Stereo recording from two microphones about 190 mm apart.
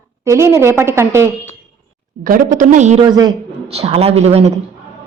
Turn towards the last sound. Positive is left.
turn(degrees=-35)  # may be behind; listen again after turning